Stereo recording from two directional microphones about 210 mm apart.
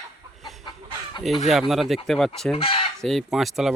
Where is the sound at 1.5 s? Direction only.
Centre (ahead or behind).